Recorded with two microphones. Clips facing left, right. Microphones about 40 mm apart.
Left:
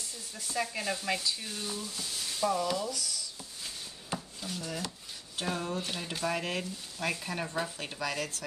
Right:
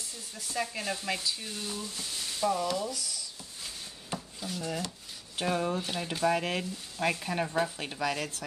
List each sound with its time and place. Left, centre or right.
0.4 s speech: centre
4.1 s chopping: centre
5.3 s speech: centre
5.8 s speech: centre